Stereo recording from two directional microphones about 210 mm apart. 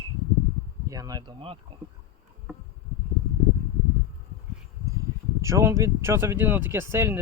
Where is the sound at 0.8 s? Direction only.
15° right (ahead or behind).